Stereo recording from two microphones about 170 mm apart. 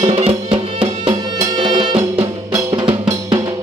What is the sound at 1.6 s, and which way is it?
Music, 30° right (ahead or behind).